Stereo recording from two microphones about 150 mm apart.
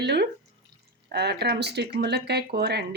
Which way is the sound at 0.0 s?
90° right.